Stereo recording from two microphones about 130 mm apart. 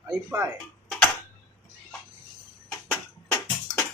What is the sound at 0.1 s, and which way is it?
Speech, 20° right (ahead or behind).